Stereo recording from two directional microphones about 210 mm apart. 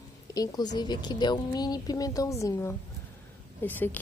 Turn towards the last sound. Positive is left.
turn(degrees=10)  # may be behind; listen again after turning